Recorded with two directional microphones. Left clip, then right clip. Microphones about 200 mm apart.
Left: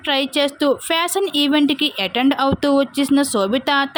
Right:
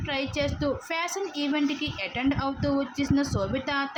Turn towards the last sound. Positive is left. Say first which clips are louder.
# left 11 dB
turn(degrees=50)  # may be behind; listen again after turning